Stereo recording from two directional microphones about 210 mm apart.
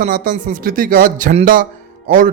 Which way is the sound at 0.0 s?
40° right (ahead or behind).